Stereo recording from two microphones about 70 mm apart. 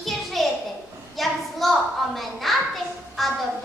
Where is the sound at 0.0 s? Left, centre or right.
Centre.